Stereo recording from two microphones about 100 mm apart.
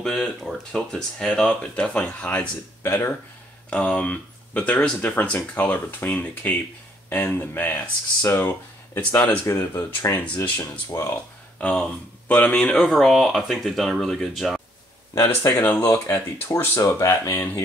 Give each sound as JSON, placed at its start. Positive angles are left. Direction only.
{"t": 0.0, "sound": "speech", "side_deg": 5}
{"t": 2.8, "sound": "speech", "side_deg": 25}
{"t": 3.7, "sound": "speech", "side_deg": 10}
{"t": 9.5, "sound": "speech", "side_deg": 30}
{"t": 10.1, "sound": "speech", "side_deg": 15}
{"t": 11.6, "sound": "speech", "side_deg": 10}
{"t": 12.7, "sound": "speech", "side_deg": 5}
{"t": 15.1, "sound": "speech", "side_deg": 20}